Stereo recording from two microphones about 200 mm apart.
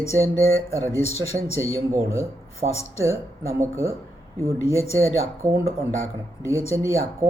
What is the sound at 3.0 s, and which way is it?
Speech, 15° right (ahead or behind).